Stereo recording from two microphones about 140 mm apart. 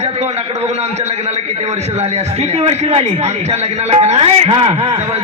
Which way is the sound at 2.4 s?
50° right (ahead or behind).